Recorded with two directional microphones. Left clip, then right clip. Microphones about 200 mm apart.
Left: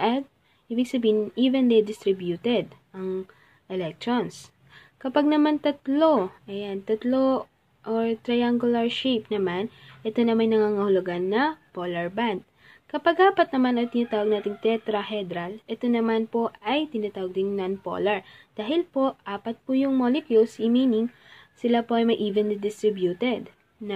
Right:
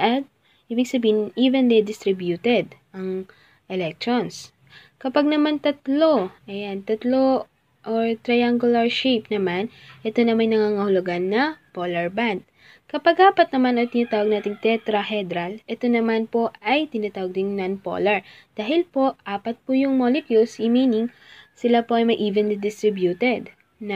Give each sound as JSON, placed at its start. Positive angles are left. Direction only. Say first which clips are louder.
{"t": 0.7, "sound": "speech", "louder": "right 3 dB", "side_deg": -5}